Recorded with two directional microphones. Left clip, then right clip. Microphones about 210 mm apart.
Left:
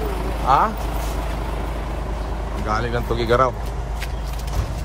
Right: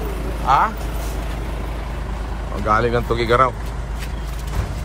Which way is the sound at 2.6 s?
10° left (ahead or behind).